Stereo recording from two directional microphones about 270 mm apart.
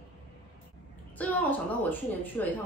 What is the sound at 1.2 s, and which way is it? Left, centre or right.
Speech, centre.